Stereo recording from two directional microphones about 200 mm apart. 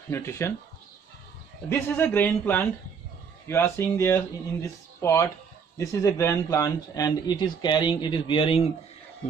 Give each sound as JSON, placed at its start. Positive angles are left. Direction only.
{"t": 0.1, "sound": "speech", "side_deg": 15}
{"t": 1.7, "sound": "speech", "side_deg": 10}